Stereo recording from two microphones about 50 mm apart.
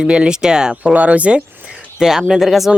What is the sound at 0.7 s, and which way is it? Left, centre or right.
Speech, right.